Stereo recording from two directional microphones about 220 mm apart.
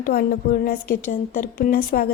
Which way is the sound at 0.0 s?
40° left (ahead or behind).